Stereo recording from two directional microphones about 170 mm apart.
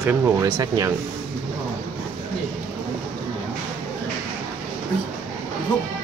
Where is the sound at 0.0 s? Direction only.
15° right (ahead or behind).